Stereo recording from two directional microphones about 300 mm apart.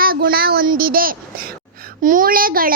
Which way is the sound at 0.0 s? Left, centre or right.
Right.